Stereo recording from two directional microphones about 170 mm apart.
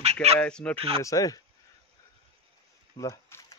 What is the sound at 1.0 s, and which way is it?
Speech, 20° left (ahead or behind).